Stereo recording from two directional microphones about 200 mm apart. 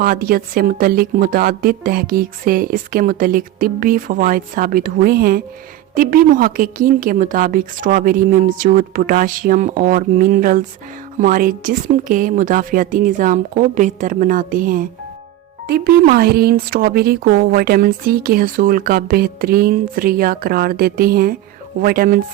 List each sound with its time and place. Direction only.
0.0 s a woman's voice: 45° right (ahead or behind)